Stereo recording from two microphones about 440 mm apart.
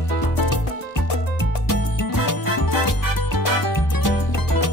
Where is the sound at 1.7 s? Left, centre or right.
Left.